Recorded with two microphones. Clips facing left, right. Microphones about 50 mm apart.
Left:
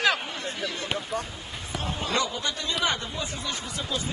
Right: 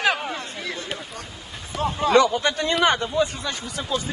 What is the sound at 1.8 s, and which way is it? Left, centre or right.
Speech, right.